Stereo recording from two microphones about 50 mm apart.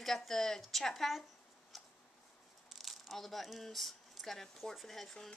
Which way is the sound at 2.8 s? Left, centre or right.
Centre.